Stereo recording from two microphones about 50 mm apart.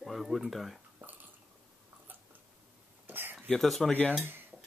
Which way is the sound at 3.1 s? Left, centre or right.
Right.